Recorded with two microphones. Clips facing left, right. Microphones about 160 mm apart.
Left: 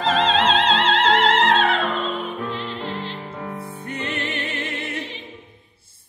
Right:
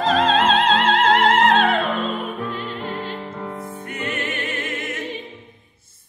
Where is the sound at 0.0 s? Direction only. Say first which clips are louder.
Right 2 dB; 50° right (ahead or behind).